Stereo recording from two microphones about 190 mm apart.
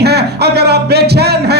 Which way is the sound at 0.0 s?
60° right (ahead or behind).